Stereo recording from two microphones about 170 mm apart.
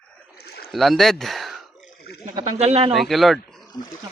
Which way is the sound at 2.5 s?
40° right (ahead or behind).